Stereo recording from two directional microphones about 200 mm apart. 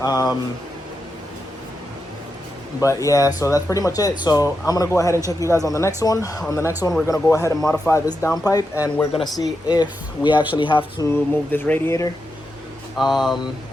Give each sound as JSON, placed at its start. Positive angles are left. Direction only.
{"t": 0.0, "sound": "speech", "side_deg": 20}
{"t": 2.8, "sound": "speech", "side_deg": 15}
{"t": 10.3, "sound": "speech", "side_deg": -10}
{"t": 10.6, "sound": "speech", "side_deg": 25}
{"t": 11.1, "sound": "speech", "side_deg": 10}
{"t": 13.0, "sound": "speech", "side_deg": 0}